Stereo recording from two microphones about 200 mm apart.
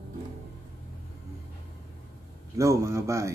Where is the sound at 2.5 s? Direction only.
15° right (ahead or behind).